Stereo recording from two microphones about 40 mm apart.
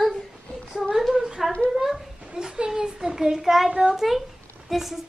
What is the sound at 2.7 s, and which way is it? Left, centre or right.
A child's voice, centre.